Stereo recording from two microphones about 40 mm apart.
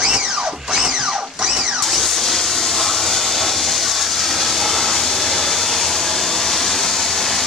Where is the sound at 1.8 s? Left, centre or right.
Centre.